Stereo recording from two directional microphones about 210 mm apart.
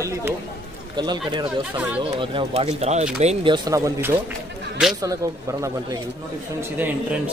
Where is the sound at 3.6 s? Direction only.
15° right (ahead or behind).